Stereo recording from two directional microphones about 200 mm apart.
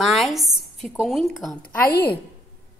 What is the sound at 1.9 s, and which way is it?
Speech, 50° left (ahead or behind).